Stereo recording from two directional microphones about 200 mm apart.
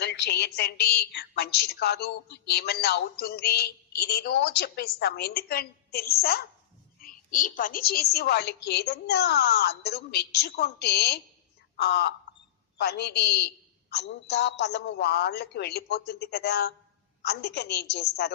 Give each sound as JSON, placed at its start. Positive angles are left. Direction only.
{"t": 0.0, "sound": "a woman's voice", "side_deg": 55}